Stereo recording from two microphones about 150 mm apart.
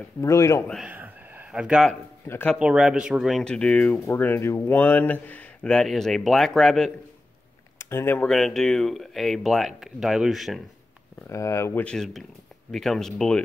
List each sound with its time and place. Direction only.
0.2 s speech: 20° left (ahead or behind)
0.8 s a sound: 10° right (ahead or behind)
2.2 s speech: 15° left (ahead or behind)
2.5 s speech: 5° right (ahead or behind)
7.8 s speech: 15° left (ahead or behind)
8.3 s speech: centre (ahead or behind)
11.2 s speech: 20° left (ahead or behind); by 13.4 s 5° left (ahead or behind)